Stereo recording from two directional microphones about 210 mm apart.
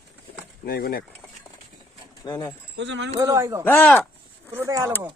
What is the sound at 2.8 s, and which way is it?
Speech, 60° right (ahead or behind).